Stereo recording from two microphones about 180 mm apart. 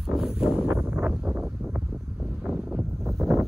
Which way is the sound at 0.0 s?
Centre (ahead or behind).